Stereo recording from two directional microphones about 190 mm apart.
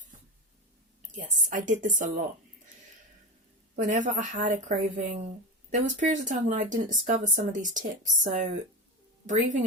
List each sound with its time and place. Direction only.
0.1 s a sound: 45° right (ahead or behind)
1.1 s a woman's voice: 40° right (ahead or behind)
3.8 s speech: 40° right (ahead or behind)